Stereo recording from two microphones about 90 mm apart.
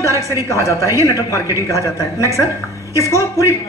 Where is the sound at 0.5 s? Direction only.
35° left (ahead or behind).